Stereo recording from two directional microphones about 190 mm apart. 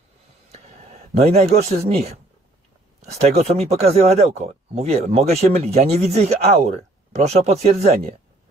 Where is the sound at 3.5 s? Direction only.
35° right (ahead or behind).